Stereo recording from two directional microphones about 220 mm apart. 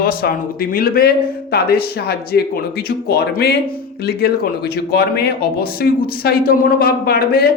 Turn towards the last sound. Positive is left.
turn(degrees=45)  # may be behind; listen again after turning